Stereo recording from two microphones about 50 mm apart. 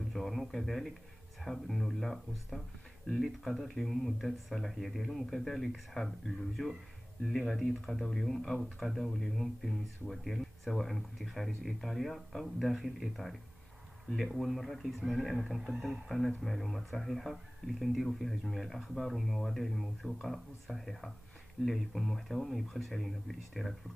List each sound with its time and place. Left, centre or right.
0.1 s speech: centre